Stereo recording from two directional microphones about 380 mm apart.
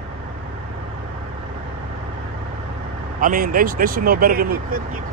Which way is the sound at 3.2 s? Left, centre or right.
Right.